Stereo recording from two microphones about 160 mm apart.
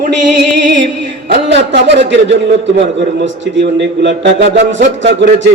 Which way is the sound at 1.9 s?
90° right.